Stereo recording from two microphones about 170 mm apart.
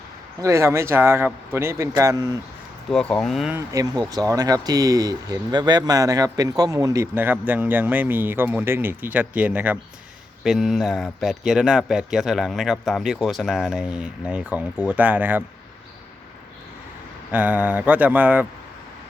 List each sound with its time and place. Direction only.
0.4 s speech: 15° right (ahead or behind)
2.9 s speech: 5° left (ahead or behind)
3.5 s speech: 20° right (ahead or behind)
17.3 s speech: 10° right (ahead or behind)